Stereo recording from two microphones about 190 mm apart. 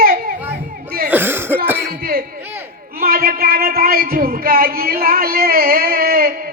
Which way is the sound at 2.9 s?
50° right (ahead or behind).